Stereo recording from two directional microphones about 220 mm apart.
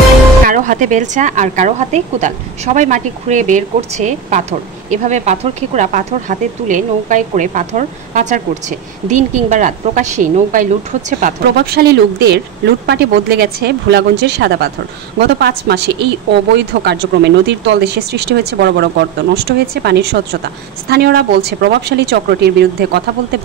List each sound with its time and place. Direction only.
0.5 s a woman's voice: 35° right (ahead or behind)